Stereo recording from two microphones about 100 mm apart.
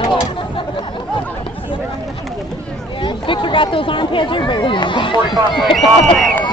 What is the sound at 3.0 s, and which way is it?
Speech, 55° left (ahead or behind).